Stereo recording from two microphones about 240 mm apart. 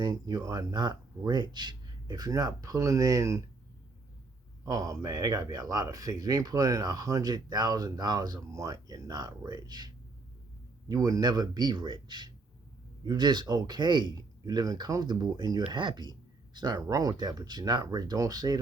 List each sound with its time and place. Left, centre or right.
0.0 s speech: centre
4.6 s speech: centre